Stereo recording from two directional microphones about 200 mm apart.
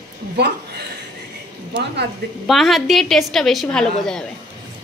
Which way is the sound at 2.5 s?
Centre (ahead or behind).